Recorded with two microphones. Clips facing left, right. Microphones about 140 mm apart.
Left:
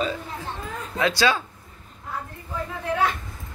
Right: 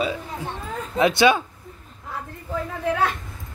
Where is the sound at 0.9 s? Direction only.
20° right (ahead or behind).